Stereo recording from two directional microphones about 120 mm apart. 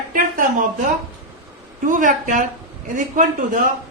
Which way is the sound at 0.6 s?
90° right.